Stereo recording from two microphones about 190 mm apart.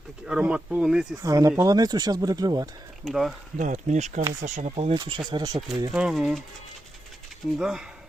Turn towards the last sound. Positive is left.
turn(degrees=-5)  # may be behind; listen again after turning